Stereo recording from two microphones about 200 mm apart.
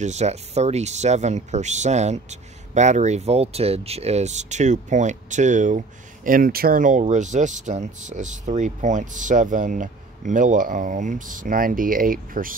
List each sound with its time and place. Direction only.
0.0 s speech: 35° right (ahead or behind)